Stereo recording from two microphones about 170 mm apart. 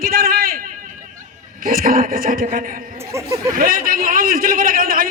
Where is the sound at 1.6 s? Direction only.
55° right (ahead or behind).